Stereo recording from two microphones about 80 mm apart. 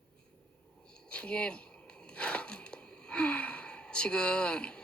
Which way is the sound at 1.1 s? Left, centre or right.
Centre.